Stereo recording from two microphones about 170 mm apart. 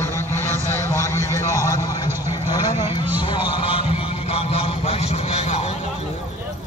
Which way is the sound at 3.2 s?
30° left (ahead or behind).